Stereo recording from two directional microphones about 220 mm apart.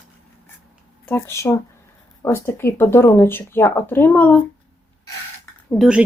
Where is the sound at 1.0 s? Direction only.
10° left (ahead or behind).